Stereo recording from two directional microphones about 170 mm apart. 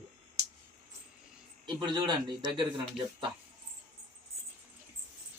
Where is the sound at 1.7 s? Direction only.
25° right (ahead or behind).